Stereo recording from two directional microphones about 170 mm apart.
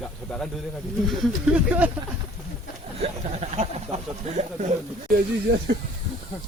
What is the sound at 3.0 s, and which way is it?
Speech, 40° right (ahead or behind).